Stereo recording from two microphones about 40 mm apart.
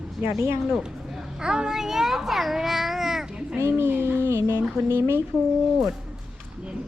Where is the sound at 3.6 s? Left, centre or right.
Right.